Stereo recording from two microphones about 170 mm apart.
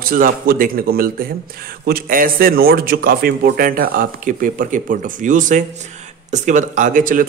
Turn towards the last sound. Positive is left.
turn(degrees=-50)  # may be behind; listen again after turning